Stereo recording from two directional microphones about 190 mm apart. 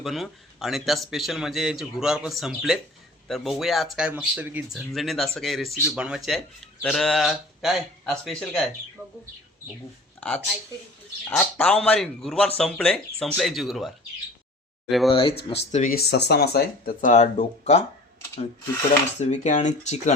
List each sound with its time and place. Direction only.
0.0 s a man's voice: centre (ahead or behind)
9.0 s bird: 10° right (ahead or behind)
10.2 s a man's voice: 5° left (ahead or behind)
15.4 s speech: 40° left (ahead or behind)
19.2 s speech: 40° left (ahead or behind)